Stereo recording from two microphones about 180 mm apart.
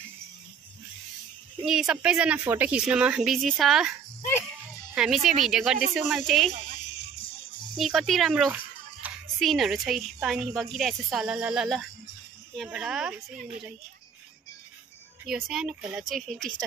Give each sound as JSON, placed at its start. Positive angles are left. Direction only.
{"t": 1.6, "sound": "a woman's voice", "side_deg": -5}
{"t": 4.9, "sound": "a woman's voice", "side_deg": -5}
{"t": 7.2, "sound": "music", "side_deg": 30}
{"t": 7.7, "sound": "a woman's voice", "side_deg": -5}
{"t": 15.2, "sound": "a woman's voice", "side_deg": 0}